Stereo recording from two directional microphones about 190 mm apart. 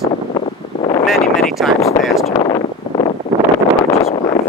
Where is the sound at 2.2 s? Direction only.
25° left (ahead or behind).